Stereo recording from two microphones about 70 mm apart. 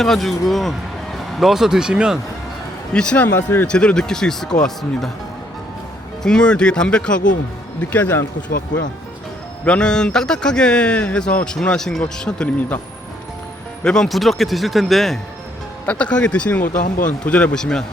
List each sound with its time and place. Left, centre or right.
0.0 s speech: centre
2.9 s speech: centre
3.2 s speech: left
3.7 s speech: centre
6.2 s speech: centre
9.6 s speech: centre
13.8 s speech: centre
15.9 s speech: centre